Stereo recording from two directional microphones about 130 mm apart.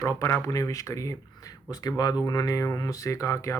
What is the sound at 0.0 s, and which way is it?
Speech, 20° left (ahead or behind).